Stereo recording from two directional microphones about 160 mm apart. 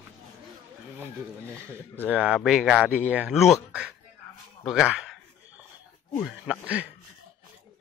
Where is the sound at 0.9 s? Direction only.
15° right (ahead or behind).